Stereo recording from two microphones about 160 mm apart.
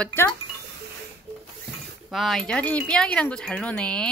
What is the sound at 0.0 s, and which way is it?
Speech, 10° left (ahead or behind).